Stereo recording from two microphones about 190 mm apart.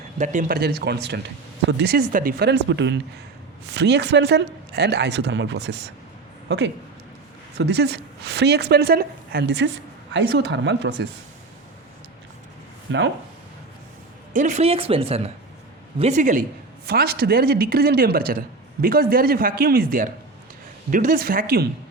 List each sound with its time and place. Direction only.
0.2 s a woman's voice: 45° right (ahead or behind); by 11.0 s 70° right (ahead or behind)
12.9 s a woman's voice: 75° right (ahead or behind)
14.3 s a woman's voice: 40° right (ahead or behind); by 21.7 s 55° right (ahead or behind)